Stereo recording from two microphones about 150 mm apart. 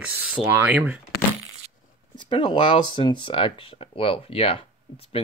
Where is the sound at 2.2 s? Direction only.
30° left (ahead or behind).